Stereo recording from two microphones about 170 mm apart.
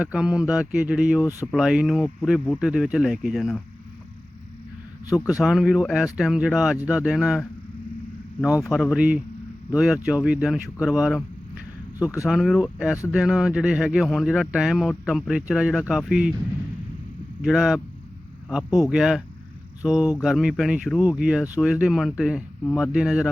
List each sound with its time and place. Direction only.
0.0 s speech: 5° right (ahead or behind)
5.0 s speech: 20° left (ahead or behind)
5.4 s speech: centre (ahead or behind)
8.4 s speech: 20° left (ahead or behind)
9.0 s speech: 5° right (ahead or behind)
11.9 s speech: 20° left (ahead or behind)
12.3 s speech: centre (ahead or behind)
17.4 s speech: centre (ahead or behind)